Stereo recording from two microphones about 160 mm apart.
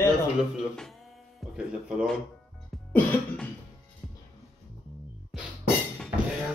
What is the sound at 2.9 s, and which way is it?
Cough, 10° left (ahead or behind).